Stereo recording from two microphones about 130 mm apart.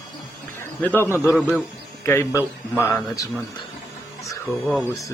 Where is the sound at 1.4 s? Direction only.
5° left (ahead or behind).